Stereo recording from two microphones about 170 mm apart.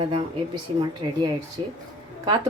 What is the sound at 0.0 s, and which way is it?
A woman's voice, 25° right (ahead or behind).